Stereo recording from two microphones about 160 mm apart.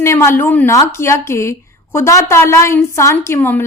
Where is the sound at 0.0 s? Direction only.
15° left (ahead or behind).